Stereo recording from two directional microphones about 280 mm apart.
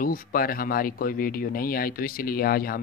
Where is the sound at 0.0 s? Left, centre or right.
Left.